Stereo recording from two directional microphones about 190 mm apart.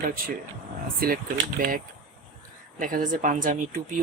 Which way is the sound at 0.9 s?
50° right (ahead or behind).